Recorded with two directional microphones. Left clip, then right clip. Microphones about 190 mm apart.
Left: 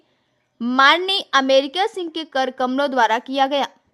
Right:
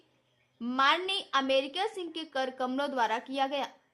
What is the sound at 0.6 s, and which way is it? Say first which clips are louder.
Speech: left 13 dB; 50° left (ahead or behind).